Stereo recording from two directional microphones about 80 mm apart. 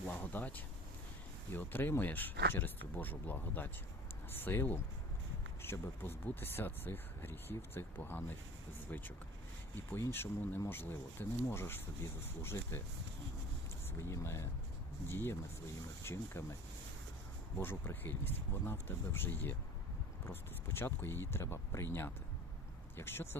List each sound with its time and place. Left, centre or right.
0.2 s speech: left
14.0 s speech: left
17.6 s speech: left
23.0 s speech: left